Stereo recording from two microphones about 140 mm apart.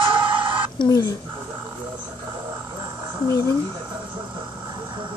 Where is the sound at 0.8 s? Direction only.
25° left (ahead or behind).